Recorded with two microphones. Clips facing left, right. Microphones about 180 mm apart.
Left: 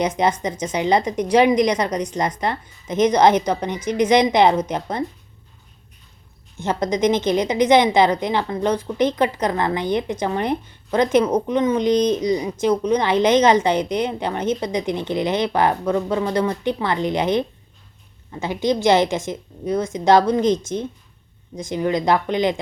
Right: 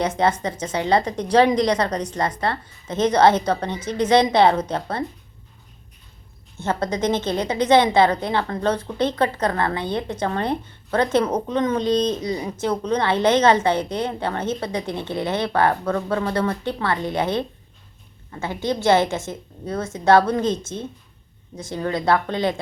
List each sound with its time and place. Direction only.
0.0 s a woman's voice: 15° left (ahead or behind)
6.6 s a woman's voice: 15° left (ahead or behind)